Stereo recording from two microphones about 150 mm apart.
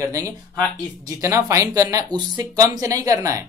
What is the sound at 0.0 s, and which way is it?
Speech, 20° right (ahead or behind).